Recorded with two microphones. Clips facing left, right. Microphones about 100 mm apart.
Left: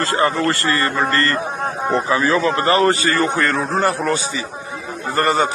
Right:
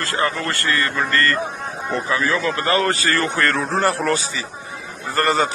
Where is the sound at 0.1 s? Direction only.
30° left (ahead or behind); by 4.1 s 5° left (ahead or behind).